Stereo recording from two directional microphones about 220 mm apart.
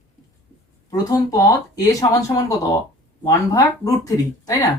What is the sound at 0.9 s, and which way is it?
Speech, 15° left (ahead or behind).